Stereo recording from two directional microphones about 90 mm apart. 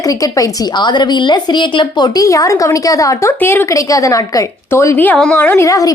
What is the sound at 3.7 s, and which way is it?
Speech, 35° left (ahead or behind).